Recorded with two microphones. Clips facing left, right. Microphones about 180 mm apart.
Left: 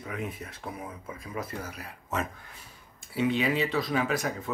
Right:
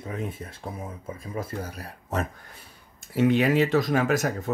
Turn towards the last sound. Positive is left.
turn(degrees=-45)  # may be behind; listen again after turning